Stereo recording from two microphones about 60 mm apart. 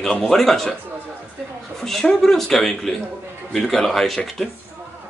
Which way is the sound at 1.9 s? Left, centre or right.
Centre.